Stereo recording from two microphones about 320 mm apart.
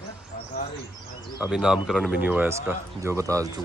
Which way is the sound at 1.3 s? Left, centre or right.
Centre.